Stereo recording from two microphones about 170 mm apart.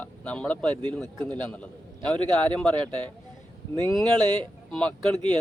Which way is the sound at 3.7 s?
25° right (ahead or behind).